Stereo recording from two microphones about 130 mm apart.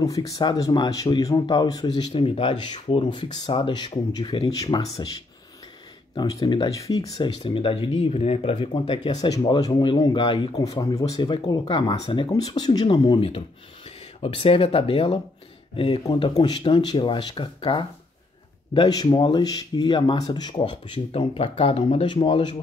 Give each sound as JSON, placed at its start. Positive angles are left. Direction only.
{"t": 0.0, "sound": "speech", "side_deg": 25}
{"t": 2.1, "sound": "speech", "side_deg": 45}
{"t": 6.1, "sound": "speech", "side_deg": 35}
{"t": 6.8, "sound": "speech", "side_deg": 25}
{"t": 7.2, "sound": "speech", "side_deg": 45}
{"t": 8.5, "sound": "speech", "side_deg": 40}
{"t": 10.6, "sound": "speech", "side_deg": 25}
{"t": 12.3, "sound": "speech", "side_deg": 30}
{"t": 16.0, "sound": "speech", "side_deg": 30}